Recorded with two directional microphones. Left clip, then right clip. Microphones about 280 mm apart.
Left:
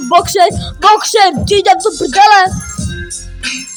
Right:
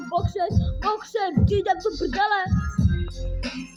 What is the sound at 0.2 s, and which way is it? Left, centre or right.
Speech, left.